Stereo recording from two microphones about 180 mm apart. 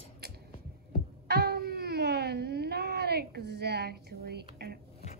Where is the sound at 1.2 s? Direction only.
60° right (ahead or behind).